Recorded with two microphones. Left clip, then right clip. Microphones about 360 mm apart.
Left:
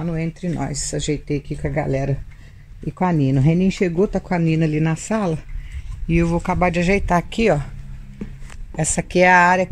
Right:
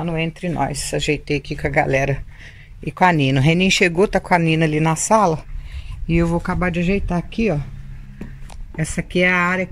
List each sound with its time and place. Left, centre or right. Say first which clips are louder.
0.6 s speech: right 6 dB; right
6.0 s speech: even; centre; by 7.6 s left
8.7 s speech: left 3 dB; centre